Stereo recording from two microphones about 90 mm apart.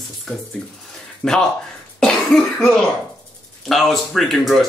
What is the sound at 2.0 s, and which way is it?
Cough, 5° left (ahead or behind).